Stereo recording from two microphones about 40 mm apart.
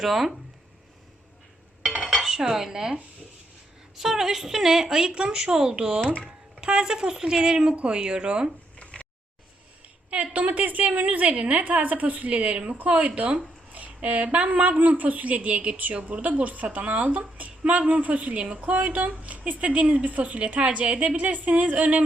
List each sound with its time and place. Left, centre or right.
0.0 s speech: centre
2.1 s dishes: centre
3.9 s a woman's voice: centre
8.8 s a sound: left
10.1 s speech: right
18.6 s speech: right